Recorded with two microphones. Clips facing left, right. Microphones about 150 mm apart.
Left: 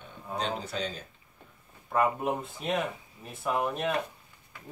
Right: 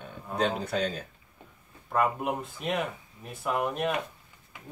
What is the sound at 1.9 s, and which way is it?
Speech, centre (ahead or behind).